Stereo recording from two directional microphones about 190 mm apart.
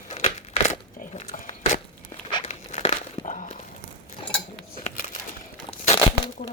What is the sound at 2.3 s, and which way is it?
Crumpling, 25° left (ahead or behind).